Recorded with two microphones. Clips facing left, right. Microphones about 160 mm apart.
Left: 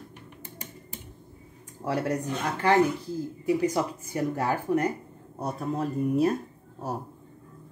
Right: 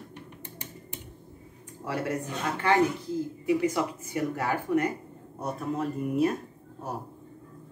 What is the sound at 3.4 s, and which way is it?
Speech, 35° left (ahead or behind).